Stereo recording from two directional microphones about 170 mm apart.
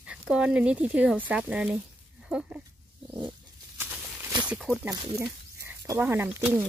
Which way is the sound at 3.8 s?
10° right (ahead or behind).